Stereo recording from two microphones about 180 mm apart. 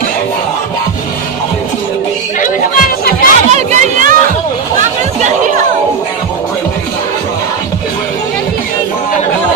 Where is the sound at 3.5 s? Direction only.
40° right (ahead or behind).